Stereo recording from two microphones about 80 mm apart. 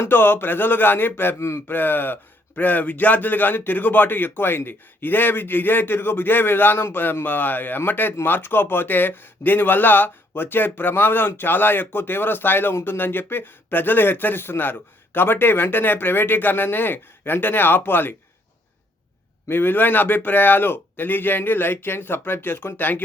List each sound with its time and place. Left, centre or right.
0.0 s speech: left
1.6 s speech: left
19.5 s speech: left